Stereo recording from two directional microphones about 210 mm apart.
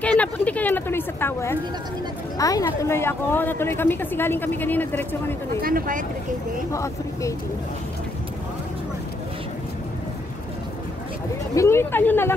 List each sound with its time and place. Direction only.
0.0 s a sound: 5° left (ahead or behind)
2.3 s speech: 15° left (ahead or behind)
5.6 s speech: 45° right (ahead or behind)
6.7 s speech: 15° left (ahead or behind)
11.5 s speech: 15° left (ahead or behind)